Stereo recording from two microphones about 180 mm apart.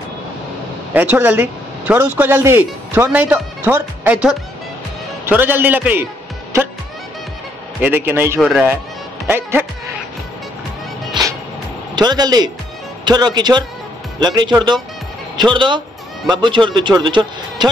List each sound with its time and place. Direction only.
0.9 s a man's voice: 10° right (ahead or behind)
7.8 s a man's voice: 10° right (ahead or behind)
8.4 s speech: centre (ahead or behind)
9.3 s a man's voice: 10° right (ahead or behind)
11.9 s a man's voice: 25° right (ahead or behind)